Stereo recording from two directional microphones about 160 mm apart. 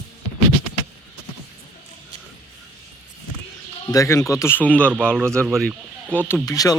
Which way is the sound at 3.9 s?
20° left (ahead or behind).